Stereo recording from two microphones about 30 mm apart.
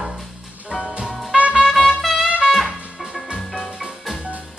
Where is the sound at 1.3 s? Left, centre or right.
Right.